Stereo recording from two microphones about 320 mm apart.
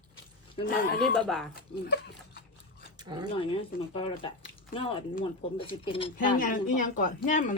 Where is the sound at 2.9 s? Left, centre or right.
Centre.